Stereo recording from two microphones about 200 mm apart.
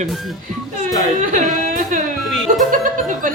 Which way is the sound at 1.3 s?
40° right (ahead or behind).